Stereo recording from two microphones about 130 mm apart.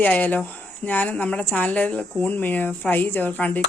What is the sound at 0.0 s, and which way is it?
A woman's voice, 10° left (ahead or behind).